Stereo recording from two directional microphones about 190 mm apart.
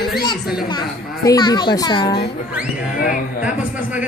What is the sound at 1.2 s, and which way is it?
Speech, 20° left (ahead or behind).